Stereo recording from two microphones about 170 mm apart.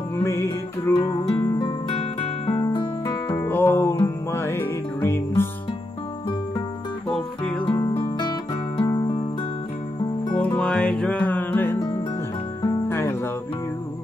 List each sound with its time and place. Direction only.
0.1 s music: 15° left (ahead or behind); by 2.6 s 35° left (ahead or behind)
3.4 s music: 10° left (ahead or behind)
7.1 s music: 5° left (ahead or behind)
7.7 s music: 15° left (ahead or behind)
8.0 s music: 25° left (ahead or behind)
10.3 s music: 5° left (ahead or behind)